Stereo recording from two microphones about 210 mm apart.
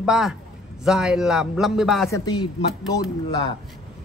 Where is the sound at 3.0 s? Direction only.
25° left (ahead or behind).